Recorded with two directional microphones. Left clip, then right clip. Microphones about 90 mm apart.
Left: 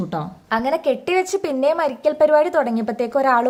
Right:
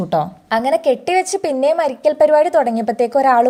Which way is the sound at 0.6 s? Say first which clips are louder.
Right 5 dB; 30° right (ahead or behind).